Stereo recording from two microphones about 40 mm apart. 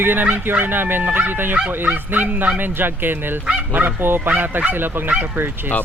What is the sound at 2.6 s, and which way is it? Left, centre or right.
Speech, right.